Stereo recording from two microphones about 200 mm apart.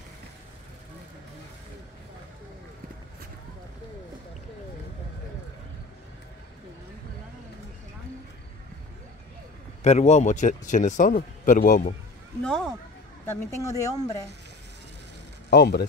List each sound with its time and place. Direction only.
9.8 s speech: 35° left (ahead or behind)
12.4 s speech: centre (ahead or behind)
13.3 s speech: 15° left (ahead or behind)
15.5 s speech: 55° left (ahead or behind)